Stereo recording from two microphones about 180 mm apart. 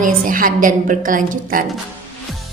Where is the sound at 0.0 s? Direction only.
50° right (ahead or behind).